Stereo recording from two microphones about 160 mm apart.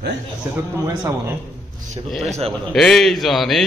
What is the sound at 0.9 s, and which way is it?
Speech, 20° right (ahead or behind).